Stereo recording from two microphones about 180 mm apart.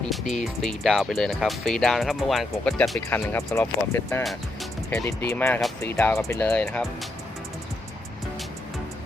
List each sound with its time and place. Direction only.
0.1 s speech: centre (ahead or behind)
3.1 s speech: 15° left (ahead or behind)